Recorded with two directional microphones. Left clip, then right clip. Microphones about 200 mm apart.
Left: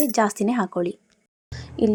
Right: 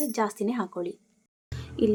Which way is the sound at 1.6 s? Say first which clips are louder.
Left 3 dB; 20° left (ahead or behind).